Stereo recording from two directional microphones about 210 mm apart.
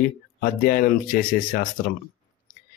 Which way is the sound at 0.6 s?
40° left (ahead or behind).